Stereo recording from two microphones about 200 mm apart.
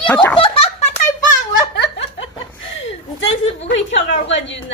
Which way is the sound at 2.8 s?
70° left (ahead or behind).